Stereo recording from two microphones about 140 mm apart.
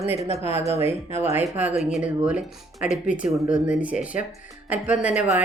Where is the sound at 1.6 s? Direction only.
10° right (ahead or behind).